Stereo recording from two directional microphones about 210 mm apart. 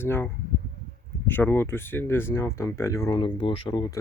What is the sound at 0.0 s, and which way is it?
Speech, 10° left (ahead or behind).